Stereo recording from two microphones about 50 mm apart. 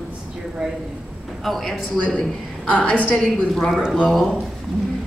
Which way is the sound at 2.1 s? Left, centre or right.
Left.